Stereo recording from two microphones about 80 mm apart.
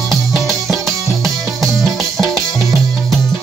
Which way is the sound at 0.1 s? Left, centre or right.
Centre.